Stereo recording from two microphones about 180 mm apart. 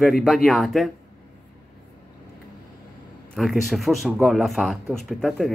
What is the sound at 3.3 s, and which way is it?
A man's voice, centre (ahead or behind).